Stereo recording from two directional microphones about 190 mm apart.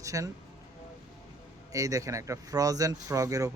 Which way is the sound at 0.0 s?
15° right (ahead or behind).